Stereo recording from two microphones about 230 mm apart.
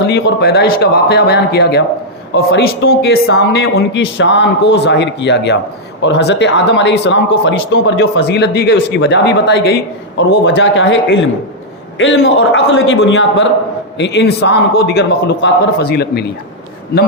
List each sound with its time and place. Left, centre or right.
0.1 s a man's voice: left